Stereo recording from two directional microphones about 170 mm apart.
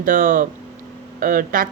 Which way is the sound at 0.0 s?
50° right (ahead or behind).